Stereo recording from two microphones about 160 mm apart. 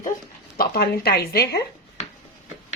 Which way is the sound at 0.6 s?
70° left (ahead or behind).